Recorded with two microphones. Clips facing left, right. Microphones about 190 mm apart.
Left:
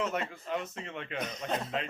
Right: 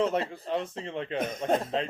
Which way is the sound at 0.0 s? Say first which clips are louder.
Right 6 dB; 30° right (ahead or behind).